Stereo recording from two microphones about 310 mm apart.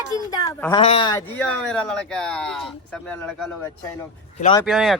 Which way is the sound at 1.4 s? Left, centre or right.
Centre.